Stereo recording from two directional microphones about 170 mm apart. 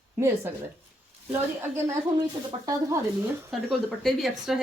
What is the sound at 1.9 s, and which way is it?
Speech, 25° right (ahead or behind).